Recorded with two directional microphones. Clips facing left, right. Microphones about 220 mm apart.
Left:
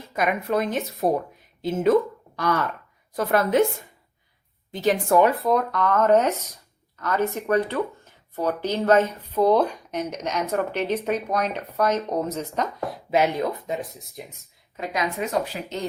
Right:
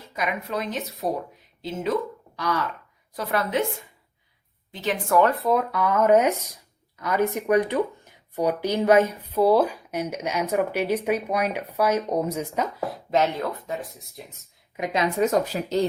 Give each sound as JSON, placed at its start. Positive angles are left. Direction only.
{"t": 0.1, "sound": "speech", "side_deg": 50}
{"t": 4.7, "sound": "a woman's voice", "side_deg": 40}
{"t": 4.9, "sound": "speech", "side_deg": 25}
{"t": 5.4, "sound": "speech", "side_deg": 0}
{"t": 13.1, "sound": "speech", "side_deg": 15}
{"t": 14.8, "sound": "speech", "side_deg": -15}
{"t": 15.2, "sound": "speech", "side_deg": -45}